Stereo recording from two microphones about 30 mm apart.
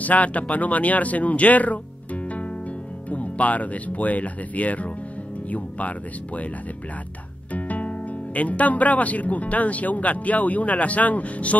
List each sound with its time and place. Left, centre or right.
0.0 s speech: left
7.5 s speech: left